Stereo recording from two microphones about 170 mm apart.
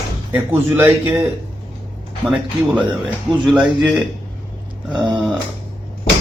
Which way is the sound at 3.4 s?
5° right (ahead or behind).